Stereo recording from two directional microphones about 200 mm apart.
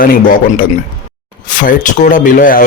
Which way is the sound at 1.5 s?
40° left (ahead or behind).